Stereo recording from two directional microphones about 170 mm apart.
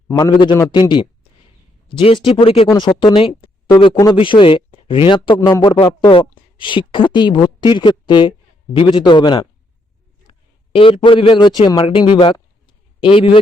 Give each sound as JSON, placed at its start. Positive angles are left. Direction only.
{"t": 0.1, "sound": "a man's voice", "side_deg": 25}
{"t": 1.9, "sound": "a man's voice", "side_deg": 30}